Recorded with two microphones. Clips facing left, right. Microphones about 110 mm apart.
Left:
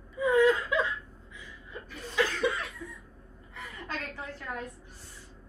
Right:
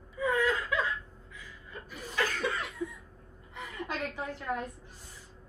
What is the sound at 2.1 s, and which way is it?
Chuckle, 15° left (ahead or behind).